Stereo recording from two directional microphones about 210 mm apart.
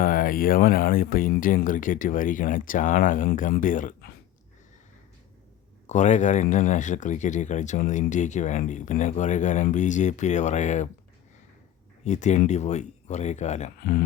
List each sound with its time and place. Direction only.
0.0 s speech: 40° left (ahead or behind)
5.9 s speech: 35° left (ahead or behind)
12.0 s speech: 35° left (ahead or behind)